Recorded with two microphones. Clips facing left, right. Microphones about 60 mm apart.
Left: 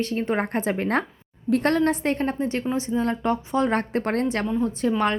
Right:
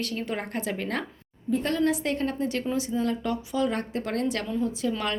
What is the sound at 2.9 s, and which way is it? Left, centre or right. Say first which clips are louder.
A woman's voice: left 4 dB; left.